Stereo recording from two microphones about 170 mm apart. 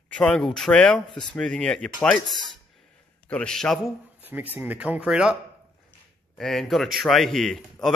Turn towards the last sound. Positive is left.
turn(degrees=0)  # may be behind; listen again after turning